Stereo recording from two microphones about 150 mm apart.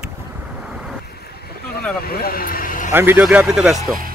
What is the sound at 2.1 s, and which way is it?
Speech, 85° left.